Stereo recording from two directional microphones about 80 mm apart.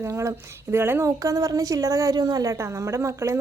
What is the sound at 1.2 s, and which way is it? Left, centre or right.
A woman's voice, right.